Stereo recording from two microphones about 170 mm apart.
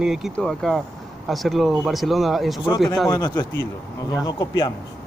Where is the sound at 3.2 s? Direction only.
25° left (ahead or behind).